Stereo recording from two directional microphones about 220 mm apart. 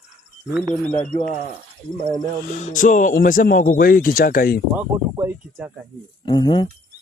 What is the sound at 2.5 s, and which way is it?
Speech, 35° left (ahead or behind).